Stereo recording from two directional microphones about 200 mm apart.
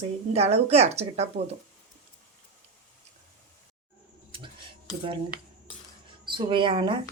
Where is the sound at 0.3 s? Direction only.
30° right (ahead or behind).